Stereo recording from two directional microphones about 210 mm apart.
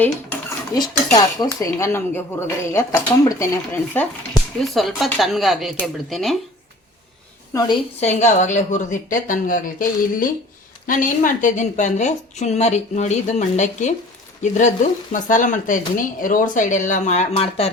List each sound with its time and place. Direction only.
0.0 s dishes: 10° left (ahead or behind)
0.8 s cutlery: 20° left (ahead or behind)
4.6 s speech: centre (ahead or behind)
8.0 s a woman's voice: 35° left (ahead or behind)